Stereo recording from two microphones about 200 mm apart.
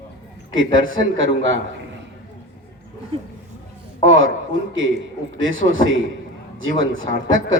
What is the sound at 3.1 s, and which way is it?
Speech, 30° right (ahead or behind).